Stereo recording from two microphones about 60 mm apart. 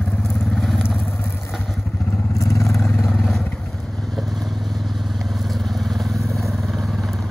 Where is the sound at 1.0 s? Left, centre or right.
Left.